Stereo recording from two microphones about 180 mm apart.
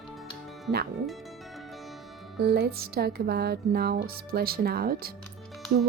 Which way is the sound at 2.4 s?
60° right (ahead or behind).